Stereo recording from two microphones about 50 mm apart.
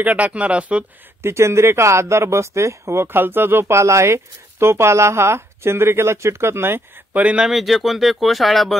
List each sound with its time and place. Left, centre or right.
0.0 s speech: right
1.2 s speech: right
3.2 s speech: right
7.3 s speech: centre